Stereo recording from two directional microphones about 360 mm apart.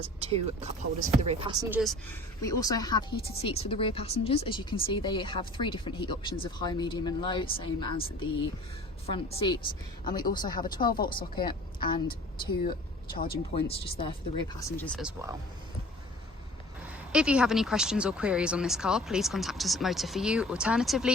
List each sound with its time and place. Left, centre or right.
0.0 s speech: centre
1.8 s speech: centre
13.1 s speech: left; by 15.4 s centre
17.1 s speech: centre